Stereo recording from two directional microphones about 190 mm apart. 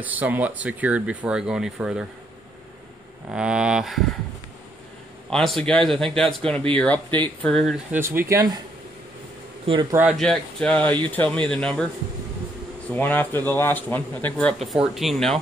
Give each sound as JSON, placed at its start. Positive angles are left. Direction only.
{"t": 0.0, "sound": "speech", "side_deg": -10}
{"t": 3.3, "sound": "speech", "side_deg": -5}
{"t": 5.3, "sound": "speech", "side_deg": 0}
{"t": 8.0, "sound": "speech", "side_deg": -10}
{"t": 9.7, "sound": "speech", "side_deg": -20}
{"t": 9.9, "sound": "speech", "side_deg": 0}
{"t": 12.9, "sound": "speech", "side_deg": 10}